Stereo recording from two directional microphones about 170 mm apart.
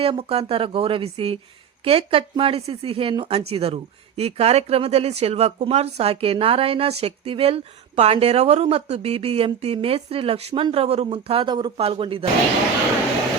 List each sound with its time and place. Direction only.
0.0 s speech: 35° right (ahead or behind)